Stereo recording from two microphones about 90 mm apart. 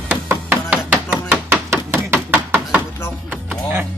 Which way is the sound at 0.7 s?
15° right (ahead or behind).